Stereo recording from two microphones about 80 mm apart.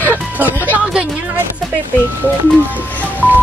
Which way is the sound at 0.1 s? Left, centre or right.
Right.